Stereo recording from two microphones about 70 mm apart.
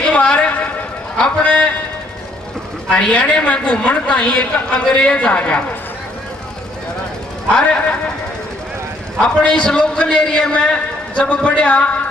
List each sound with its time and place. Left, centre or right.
0.0 s a sound: centre
1.1 s a man's voice: centre
2.9 s a woman's voice: centre
9.2 s a woman's voice: centre